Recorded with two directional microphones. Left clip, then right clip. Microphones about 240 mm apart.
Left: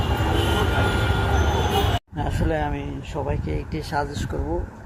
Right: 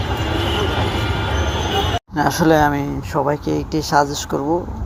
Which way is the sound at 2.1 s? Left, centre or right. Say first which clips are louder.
Right 16 dB; centre.